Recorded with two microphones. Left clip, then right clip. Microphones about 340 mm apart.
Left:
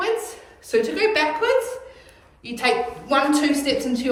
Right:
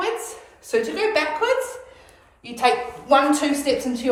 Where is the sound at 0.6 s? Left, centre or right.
Centre.